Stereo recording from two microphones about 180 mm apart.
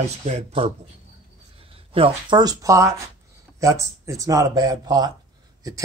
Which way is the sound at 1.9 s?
30° right (ahead or behind).